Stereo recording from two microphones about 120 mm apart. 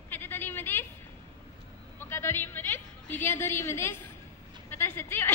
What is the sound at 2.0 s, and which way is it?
A woman's voice, 20° left (ahead or behind).